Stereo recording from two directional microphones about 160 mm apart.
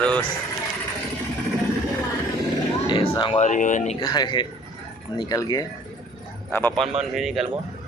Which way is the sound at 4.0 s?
25° left (ahead or behind).